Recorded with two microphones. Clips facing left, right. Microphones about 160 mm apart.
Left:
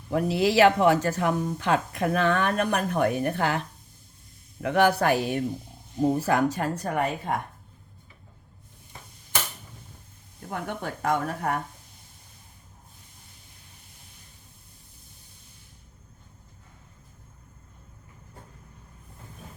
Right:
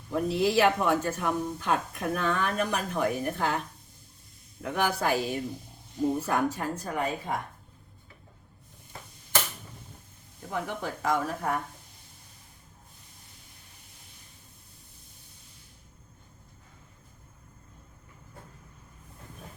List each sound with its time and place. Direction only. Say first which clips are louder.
0.1 s speech: left 2 dB; 80° left
4.6 s speech: left 7 dB; 70° left (ahead or behind)
6.1 s speech: left 4 dB; 90° left; by 7.3 s 65° left (ahead or behind)
10.5 s speech: even; 55° left (ahead or behind)